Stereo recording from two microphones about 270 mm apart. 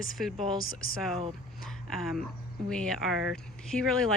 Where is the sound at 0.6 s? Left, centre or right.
Left.